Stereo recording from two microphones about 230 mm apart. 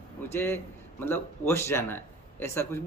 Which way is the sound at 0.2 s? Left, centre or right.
Centre.